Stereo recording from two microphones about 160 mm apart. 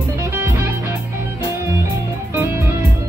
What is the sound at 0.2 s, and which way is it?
Music, 15° right (ahead or behind).